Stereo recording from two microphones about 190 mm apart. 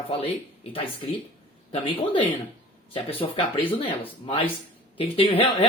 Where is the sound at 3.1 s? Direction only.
30° left (ahead or behind).